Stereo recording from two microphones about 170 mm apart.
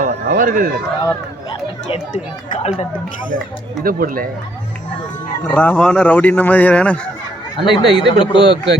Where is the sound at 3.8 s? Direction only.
60° right (ahead or behind).